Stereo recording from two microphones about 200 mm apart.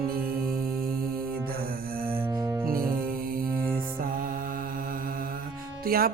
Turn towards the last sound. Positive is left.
turn(degrees=-50)  # may be behind; listen again after turning